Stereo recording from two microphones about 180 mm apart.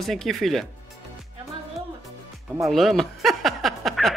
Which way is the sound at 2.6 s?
Centre (ahead or behind).